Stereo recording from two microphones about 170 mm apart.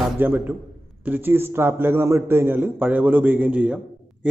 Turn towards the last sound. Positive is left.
turn(degrees=-5)  # may be behind; listen again after turning